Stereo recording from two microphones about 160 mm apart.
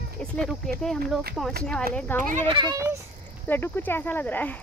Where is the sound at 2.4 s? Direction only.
30° right (ahead or behind).